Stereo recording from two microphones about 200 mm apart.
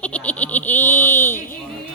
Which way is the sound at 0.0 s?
5° left (ahead or behind).